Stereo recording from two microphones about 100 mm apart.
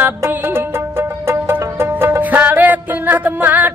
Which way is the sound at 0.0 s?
20° right (ahead or behind).